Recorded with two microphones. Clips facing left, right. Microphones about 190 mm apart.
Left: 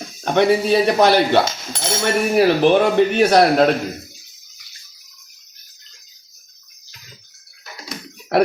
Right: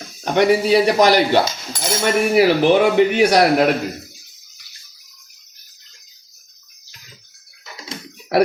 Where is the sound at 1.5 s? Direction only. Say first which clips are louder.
Even; 25° left (ahead or behind).